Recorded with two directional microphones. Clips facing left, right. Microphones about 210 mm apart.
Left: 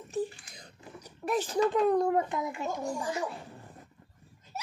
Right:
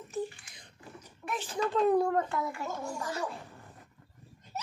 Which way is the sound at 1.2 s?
40° left (ahead or behind).